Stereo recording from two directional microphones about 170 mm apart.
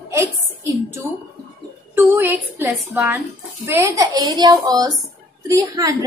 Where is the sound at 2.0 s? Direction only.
10° right (ahead or behind).